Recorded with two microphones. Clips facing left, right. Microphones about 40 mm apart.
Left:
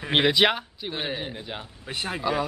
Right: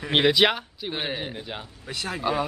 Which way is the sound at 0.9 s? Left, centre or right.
Centre.